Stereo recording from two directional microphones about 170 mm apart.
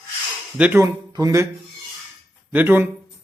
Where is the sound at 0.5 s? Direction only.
10° right (ahead or behind).